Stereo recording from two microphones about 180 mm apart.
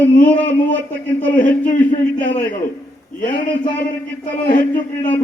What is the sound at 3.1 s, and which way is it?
A man's voice, 45° left (ahead or behind).